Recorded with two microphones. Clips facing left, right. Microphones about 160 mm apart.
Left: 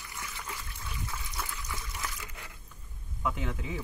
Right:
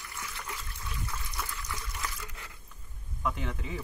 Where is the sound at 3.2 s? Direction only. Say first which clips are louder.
Even; 5° left (ahead or behind).